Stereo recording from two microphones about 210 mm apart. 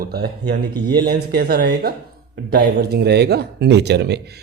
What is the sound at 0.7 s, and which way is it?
Speech, 20° right (ahead or behind).